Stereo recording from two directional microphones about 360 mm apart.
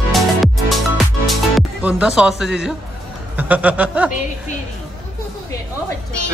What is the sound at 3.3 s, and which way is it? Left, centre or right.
Music, centre.